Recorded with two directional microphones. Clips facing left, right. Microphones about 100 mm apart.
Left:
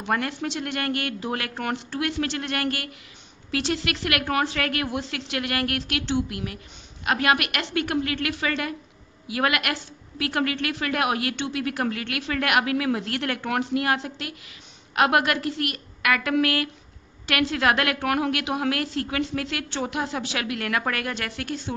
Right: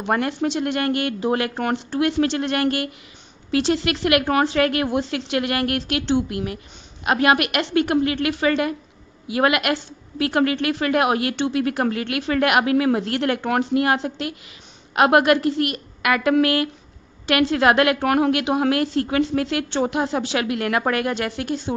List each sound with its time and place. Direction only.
0.0 s a woman's voice: 25° right (ahead or behind)